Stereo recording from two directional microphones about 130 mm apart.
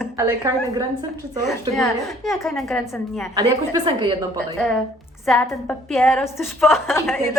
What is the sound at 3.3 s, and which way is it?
Speech, 30° right (ahead or behind).